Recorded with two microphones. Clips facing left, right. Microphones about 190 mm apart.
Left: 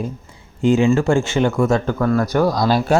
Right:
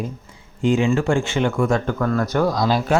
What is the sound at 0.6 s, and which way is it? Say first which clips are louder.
Speech: left 3 dB; 40° left (ahead or behind).